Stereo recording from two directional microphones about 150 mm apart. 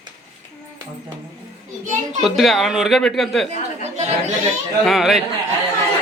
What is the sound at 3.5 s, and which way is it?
Speech, 50° right (ahead or behind).